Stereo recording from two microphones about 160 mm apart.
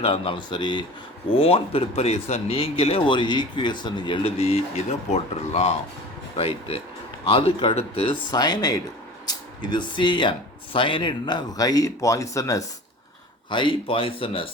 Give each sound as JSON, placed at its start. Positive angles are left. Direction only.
{"t": 0.0, "sound": "speech", "side_deg": 35}
{"t": 13.5, "sound": "speech", "side_deg": 30}